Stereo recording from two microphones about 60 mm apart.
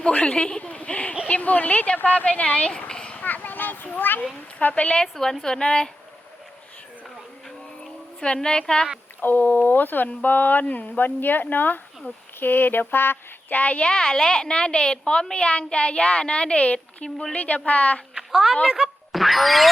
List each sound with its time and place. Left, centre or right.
0.0 s speech: centre
3.2 s children playing: left
4.6 s speech: left
5.0 s a woman's voice: centre
8.2 s a woman's voice: centre
9.2 s speech: left
18.1 s a sound: centre
18.6 s speech: centre
19.1 s speech: centre